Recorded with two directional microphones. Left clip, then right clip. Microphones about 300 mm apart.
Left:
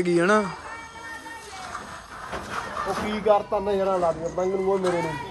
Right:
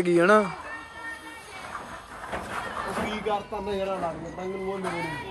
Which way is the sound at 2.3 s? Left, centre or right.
Right.